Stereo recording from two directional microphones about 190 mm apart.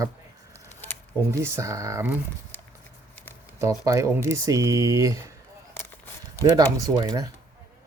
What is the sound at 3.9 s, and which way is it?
Speech, 15° right (ahead or behind).